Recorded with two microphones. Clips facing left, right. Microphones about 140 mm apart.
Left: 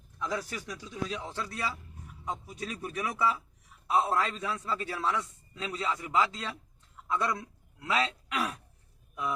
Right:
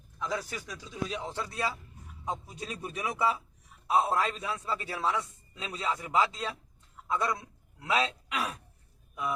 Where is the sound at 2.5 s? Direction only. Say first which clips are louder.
Left 2 dB; 20° right (ahead or behind).